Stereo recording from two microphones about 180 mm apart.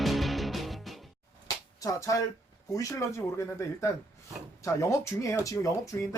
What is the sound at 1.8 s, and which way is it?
Speech, 20° left (ahead or behind).